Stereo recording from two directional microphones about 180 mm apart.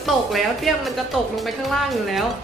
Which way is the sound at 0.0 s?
Centre (ahead or behind).